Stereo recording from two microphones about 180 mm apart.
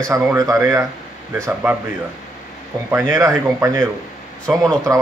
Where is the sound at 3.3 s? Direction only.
15° right (ahead or behind).